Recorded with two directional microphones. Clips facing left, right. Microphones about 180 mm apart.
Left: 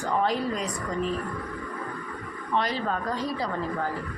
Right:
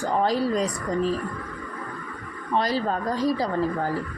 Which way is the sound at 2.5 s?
35° right (ahead or behind).